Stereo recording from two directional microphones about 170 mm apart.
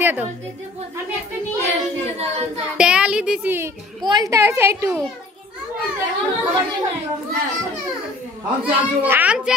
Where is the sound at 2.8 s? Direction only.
5° right (ahead or behind).